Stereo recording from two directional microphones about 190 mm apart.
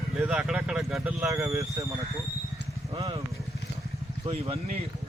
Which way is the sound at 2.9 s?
25° right (ahead or behind).